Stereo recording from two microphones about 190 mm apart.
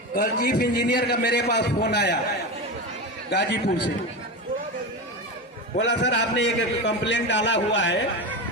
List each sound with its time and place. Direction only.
0.1 s a man's voice: 50° left (ahead or behind)
3.2 s a man's voice: 60° left (ahead or behind)
5.7 s a man's voice: 65° left (ahead or behind)